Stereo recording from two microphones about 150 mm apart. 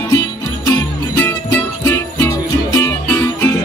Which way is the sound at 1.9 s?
20° left (ahead or behind).